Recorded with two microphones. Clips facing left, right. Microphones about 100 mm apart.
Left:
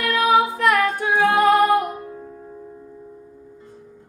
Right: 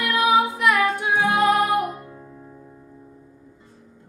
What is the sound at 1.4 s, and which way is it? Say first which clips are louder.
Music: left 4 dB; 15° right (ahead or behind).